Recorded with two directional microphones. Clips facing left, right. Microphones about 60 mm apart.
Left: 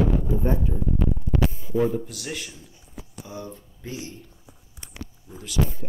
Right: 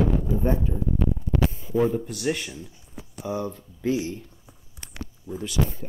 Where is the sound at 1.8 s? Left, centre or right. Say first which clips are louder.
Right 1 dB; right.